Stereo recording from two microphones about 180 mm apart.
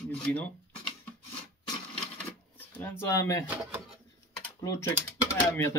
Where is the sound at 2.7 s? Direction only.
10° left (ahead or behind).